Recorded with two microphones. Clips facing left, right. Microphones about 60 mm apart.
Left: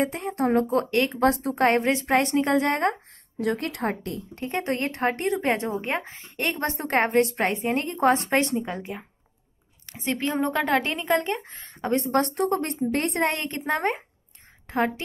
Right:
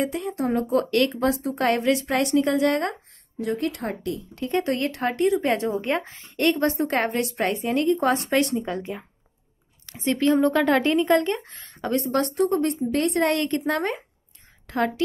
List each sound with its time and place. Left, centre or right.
0.0 s speech: left
0.7 s a woman's voice: left
1.2 s speech: left
1.6 s speech: left
3.3 s speech: left
5.5 s a woman's voice: left
7.1 s speech: left
7.4 s speech: left
8.6 s speech: centre
10.5 s speech: centre
11.5 s speech: left
12.0 s speech: left
13.2 s a woman's voice: left